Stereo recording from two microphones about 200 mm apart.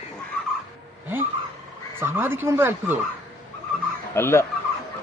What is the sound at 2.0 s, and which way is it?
Speech, 10° right (ahead or behind).